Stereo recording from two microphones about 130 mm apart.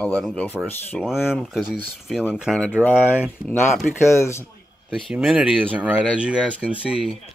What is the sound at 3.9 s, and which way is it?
Speech, 20° left (ahead or behind).